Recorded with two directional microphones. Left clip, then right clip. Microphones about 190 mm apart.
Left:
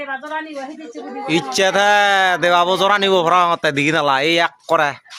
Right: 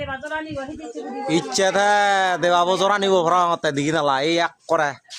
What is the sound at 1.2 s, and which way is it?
Speech, 20° left (ahead or behind).